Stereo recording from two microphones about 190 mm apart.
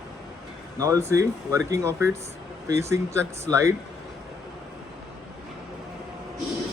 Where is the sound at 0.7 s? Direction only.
15° right (ahead or behind).